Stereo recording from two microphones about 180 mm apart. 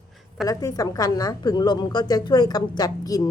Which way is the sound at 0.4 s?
20° left (ahead or behind).